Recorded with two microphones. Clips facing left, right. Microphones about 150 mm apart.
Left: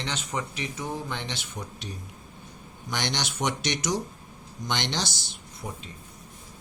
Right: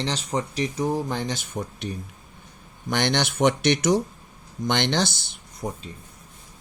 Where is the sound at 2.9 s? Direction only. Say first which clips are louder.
Right 7 dB; 55° right (ahead or behind).